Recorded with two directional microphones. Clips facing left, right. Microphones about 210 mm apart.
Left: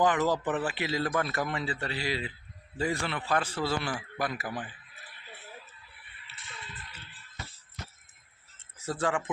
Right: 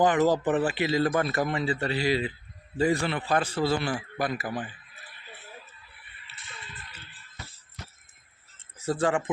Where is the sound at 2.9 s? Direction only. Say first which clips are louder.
Right 4 dB; 20° right (ahead or behind).